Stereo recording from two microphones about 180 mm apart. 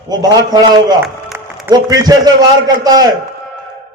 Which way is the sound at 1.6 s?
20° right (ahead or behind).